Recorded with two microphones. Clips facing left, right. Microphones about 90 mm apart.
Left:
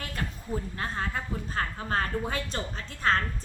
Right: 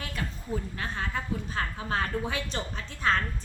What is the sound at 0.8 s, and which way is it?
A woman's voice, 40° left (ahead or behind).